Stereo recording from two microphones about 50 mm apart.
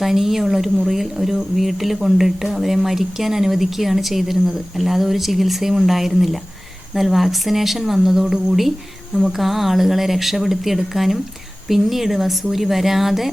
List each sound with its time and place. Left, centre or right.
0.0 s a woman's voice: centre